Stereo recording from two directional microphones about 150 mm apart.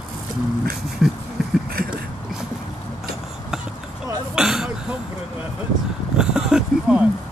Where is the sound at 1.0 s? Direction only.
Centre (ahead or behind).